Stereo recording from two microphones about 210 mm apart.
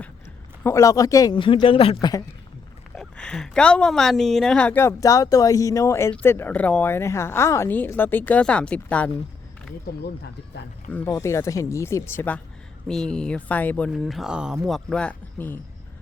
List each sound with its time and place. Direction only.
0.6 s speech: 15° left (ahead or behind)
2.9 s speech: 5° left (ahead or behind)
9.9 s speech: 45° left (ahead or behind)
10.8 s speech: 10° left (ahead or behind)